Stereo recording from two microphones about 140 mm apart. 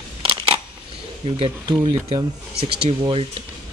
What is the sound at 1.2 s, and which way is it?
Speech, 40° right (ahead or behind).